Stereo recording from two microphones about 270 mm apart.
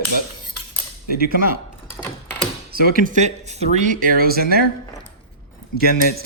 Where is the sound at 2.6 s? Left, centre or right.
Right.